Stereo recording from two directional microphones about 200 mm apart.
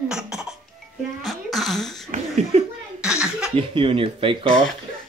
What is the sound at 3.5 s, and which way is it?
Speech, 25° right (ahead or behind).